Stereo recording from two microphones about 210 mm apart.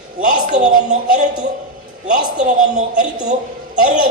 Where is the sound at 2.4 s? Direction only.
35° right (ahead or behind).